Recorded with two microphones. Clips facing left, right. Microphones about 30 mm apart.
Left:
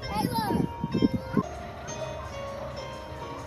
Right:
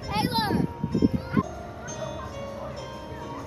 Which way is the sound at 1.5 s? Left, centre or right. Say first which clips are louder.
Right 1 dB; centre.